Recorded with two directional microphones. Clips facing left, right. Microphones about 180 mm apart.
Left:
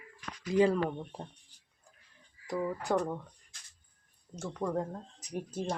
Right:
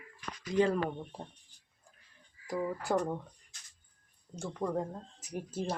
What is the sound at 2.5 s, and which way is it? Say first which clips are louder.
Speech: left 1 dB; 5° right (ahead or behind).